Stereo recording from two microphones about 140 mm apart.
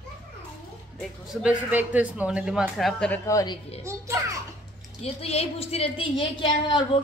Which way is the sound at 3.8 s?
20° right (ahead or behind).